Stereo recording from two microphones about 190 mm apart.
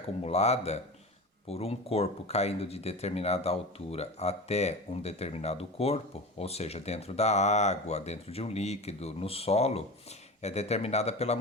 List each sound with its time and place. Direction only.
0.3 s speech: 35° left (ahead or behind)